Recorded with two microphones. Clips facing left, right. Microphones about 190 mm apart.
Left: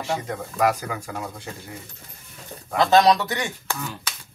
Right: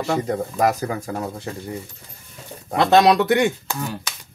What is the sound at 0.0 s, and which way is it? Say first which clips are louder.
Speech: right 6 dB; 40° right (ahead or behind).